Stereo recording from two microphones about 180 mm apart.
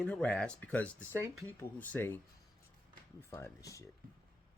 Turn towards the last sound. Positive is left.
turn(degrees=15)  # may be behind; listen again after turning